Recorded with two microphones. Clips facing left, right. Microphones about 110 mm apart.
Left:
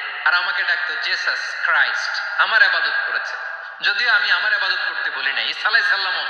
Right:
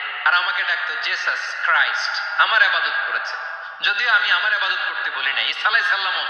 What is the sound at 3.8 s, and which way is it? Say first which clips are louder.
A man's voice: even; 25° right (ahead or behind).